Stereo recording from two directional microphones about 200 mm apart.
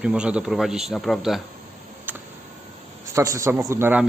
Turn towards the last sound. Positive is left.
turn(degrees=-10)  # may be behind; listen again after turning